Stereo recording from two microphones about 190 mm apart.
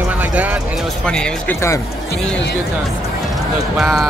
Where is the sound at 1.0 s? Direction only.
5° left (ahead or behind).